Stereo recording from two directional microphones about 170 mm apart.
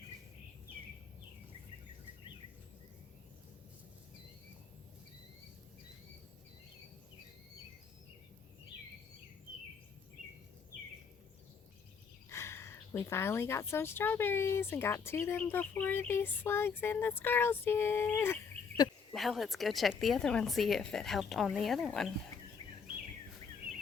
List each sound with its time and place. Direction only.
12.3 s a woman's voice: 15° left (ahead or behind)
19.1 s a woman's voice: centre (ahead or behind)